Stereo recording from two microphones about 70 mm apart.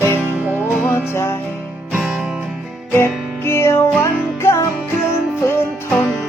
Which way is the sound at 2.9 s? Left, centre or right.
Left.